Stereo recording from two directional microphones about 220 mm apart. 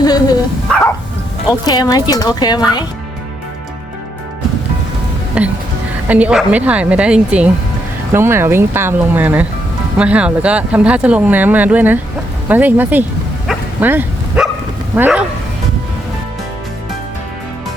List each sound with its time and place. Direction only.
0.0 s speech: 15° left (ahead or behind)
1.5 s speech: 15° left (ahead or behind)
5.4 s a woman's voice: 5° right (ahead or behind)
13.5 s bow-wow: 10° right (ahead or behind)
14.9 s speech: 5° right (ahead or behind)